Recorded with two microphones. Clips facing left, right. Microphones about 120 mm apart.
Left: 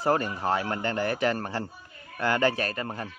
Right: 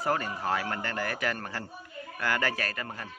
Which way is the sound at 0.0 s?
30° left (ahead or behind).